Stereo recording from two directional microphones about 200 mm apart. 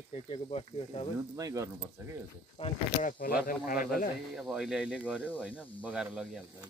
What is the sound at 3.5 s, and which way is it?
Speech, 45° left (ahead or behind).